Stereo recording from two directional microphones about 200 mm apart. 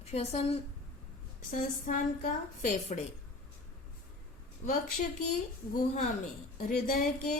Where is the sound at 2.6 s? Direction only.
35° left (ahead or behind).